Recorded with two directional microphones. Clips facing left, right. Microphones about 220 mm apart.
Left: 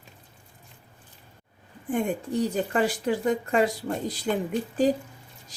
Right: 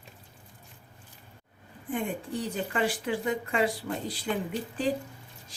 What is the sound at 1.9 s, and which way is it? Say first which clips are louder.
A woman's voice: left 5 dB; 45° left (ahead or behind).